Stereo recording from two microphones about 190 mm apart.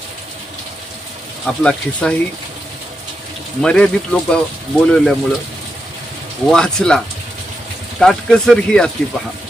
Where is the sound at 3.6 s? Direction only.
5° left (ahead or behind).